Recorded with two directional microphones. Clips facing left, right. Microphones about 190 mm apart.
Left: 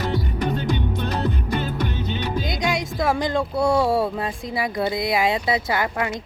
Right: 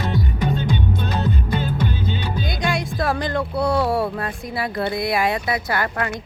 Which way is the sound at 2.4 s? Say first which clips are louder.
Even; 20° left (ahead or behind).